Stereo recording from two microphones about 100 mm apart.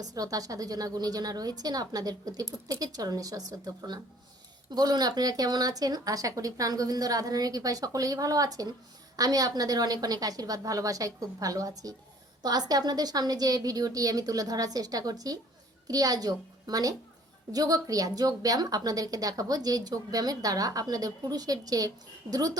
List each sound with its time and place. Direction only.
0.0 s a woman's voice: 35° right (ahead or behind)